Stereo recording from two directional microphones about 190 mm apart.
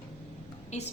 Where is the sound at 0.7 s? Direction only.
35° left (ahead or behind).